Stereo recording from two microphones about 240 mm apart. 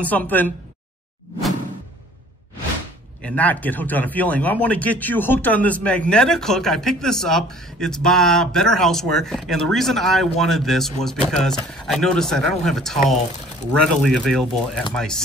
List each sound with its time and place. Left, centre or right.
0.0 s a woman's voice: centre
3.3 s speech: centre
11.9 s speech: centre